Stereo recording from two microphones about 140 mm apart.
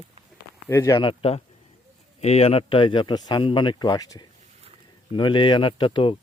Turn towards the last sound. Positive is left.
turn(degrees=40)  # may be behind; listen again after turning